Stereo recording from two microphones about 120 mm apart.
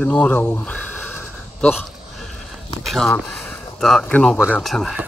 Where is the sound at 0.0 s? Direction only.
10° left (ahead or behind).